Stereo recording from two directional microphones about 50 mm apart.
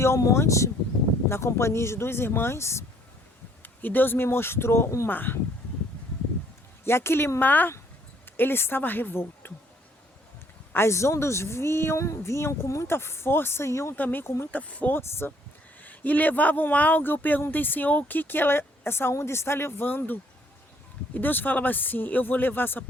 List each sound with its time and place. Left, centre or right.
0.0 s speech: left
1.3 s speech: left
3.6 s speech: left
5.0 s speech: left
6.8 s speech: left
10.8 s speech: left
11.9 s speech: left
12.9 s speech: left
13.9 s speech: left
15.2 s speech: left
15.8 s speech: left
19.1 s speech: left